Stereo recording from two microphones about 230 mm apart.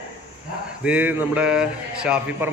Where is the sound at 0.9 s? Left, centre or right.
Centre.